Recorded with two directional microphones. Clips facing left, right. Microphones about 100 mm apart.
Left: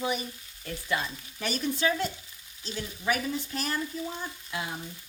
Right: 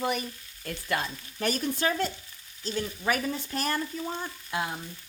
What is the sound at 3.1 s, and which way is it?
Frying, 45° right (ahead or behind).